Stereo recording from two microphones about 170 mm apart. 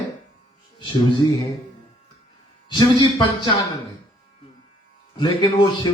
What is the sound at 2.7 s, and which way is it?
Speech, 25° left (ahead or behind).